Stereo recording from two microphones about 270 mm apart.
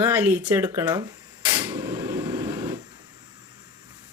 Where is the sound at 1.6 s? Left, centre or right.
Centre.